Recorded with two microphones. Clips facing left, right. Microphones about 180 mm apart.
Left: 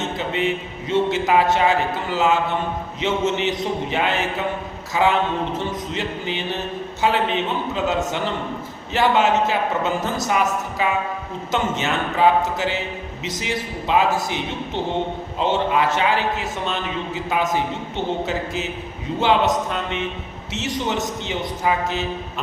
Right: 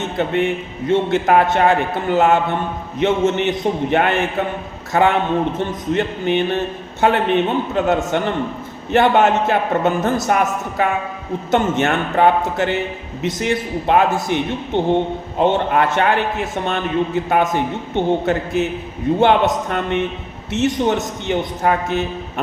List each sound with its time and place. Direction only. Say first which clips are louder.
0.2 s a man's voice: right 7 dB; 55° right (ahead or behind)